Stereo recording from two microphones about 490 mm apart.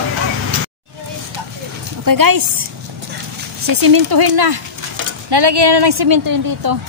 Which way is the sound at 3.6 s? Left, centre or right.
Right.